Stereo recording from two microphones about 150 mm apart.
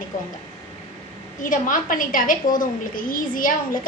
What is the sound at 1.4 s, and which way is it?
A woman's voice, 60° left (ahead or behind).